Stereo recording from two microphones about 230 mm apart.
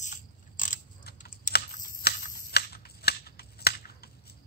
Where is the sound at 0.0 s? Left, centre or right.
Left.